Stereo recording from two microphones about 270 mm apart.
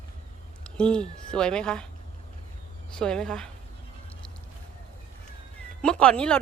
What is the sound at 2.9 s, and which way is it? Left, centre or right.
Speech, centre.